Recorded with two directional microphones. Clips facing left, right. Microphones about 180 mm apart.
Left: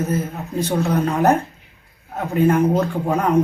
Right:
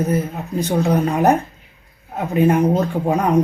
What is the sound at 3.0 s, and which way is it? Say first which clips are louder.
Speech: right 2 dB; 15° right (ahead or behind).